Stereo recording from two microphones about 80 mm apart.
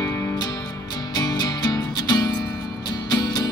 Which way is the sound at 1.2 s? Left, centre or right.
Left.